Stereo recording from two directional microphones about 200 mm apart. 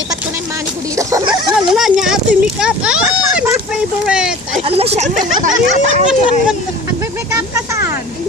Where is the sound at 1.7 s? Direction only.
Centre (ahead or behind).